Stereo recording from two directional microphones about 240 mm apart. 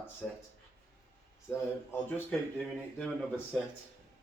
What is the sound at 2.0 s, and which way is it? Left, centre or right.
Speech, centre.